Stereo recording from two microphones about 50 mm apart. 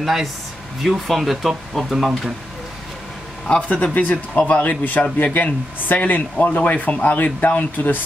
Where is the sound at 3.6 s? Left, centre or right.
Left.